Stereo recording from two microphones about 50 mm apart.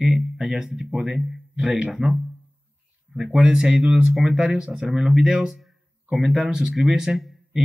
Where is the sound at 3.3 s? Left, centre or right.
Centre.